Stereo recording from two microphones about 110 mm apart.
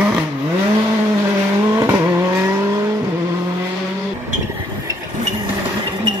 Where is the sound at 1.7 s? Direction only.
20° right (ahead or behind).